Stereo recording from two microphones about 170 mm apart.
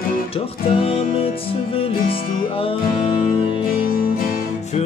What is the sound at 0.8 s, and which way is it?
Music, 35° left (ahead or behind).